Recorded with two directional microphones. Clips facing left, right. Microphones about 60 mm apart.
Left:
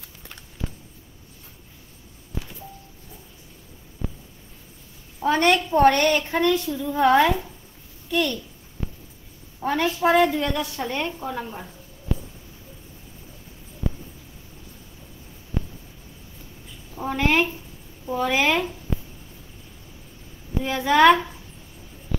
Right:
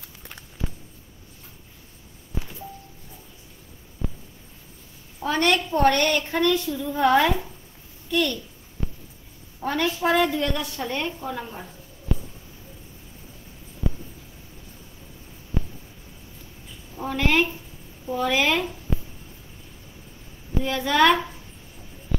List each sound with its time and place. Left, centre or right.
5.2 s a woman's voice: left
6.8 s a woman's voice: centre
9.8 s a woman's voice: left
10.3 s a woman's voice: centre
16.9 s a sound: centre
18.3 s a woman's voice: centre
20.6 s a woman's voice: centre